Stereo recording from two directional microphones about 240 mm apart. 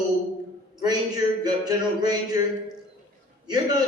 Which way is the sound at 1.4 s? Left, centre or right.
Centre.